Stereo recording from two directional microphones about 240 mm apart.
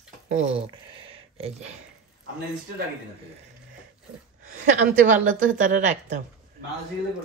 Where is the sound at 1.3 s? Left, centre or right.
Right.